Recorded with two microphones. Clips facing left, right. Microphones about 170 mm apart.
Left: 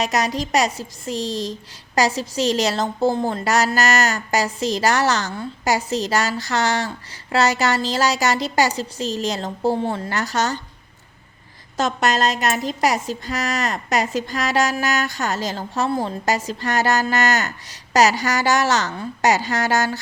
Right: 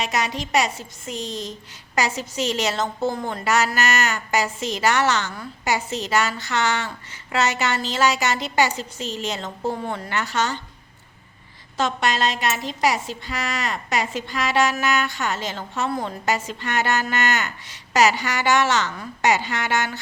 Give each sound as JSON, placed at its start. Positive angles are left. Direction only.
{"t": 0.0, "sound": "speech", "side_deg": 40}
{"t": 11.8, "sound": "speech", "side_deg": 45}